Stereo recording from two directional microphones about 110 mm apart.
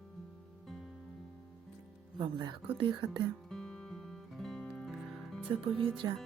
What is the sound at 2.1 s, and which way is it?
Speech, 45° right (ahead or behind).